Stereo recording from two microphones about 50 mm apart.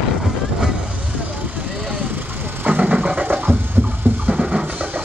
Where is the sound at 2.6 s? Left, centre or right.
Right.